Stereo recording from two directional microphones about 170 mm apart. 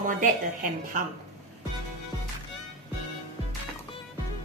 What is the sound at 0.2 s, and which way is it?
Speech, 55° right (ahead or behind).